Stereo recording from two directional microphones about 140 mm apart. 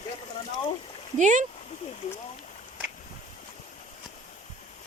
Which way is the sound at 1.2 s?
60° right (ahead or behind).